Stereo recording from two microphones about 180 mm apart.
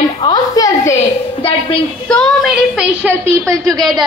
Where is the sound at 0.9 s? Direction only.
30° left (ahead or behind).